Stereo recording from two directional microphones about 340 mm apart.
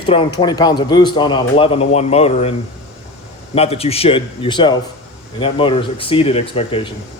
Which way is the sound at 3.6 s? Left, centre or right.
Centre.